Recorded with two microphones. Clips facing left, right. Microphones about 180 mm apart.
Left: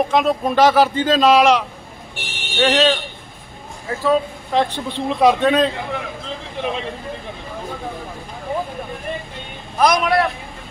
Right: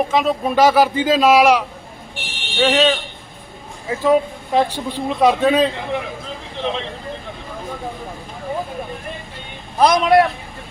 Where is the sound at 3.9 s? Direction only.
15° right (ahead or behind).